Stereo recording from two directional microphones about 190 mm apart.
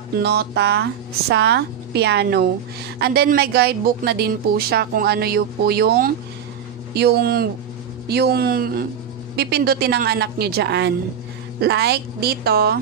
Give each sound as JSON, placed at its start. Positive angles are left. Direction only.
{"t": 0.2, "sound": "speech", "side_deg": -60}